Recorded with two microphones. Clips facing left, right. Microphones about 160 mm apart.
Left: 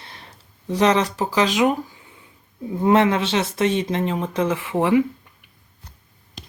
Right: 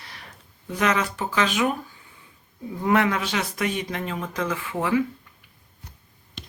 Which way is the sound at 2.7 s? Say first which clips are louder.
Left 5 dB; 25° left (ahead or behind).